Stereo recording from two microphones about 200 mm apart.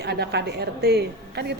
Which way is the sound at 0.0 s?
55° right (ahead or behind).